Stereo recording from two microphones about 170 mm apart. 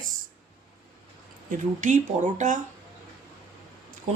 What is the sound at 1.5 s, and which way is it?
Speech, 45° right (ahead or behind).